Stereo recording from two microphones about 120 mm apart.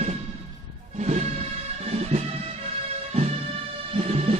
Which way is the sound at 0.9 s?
70° right (ahead or behind).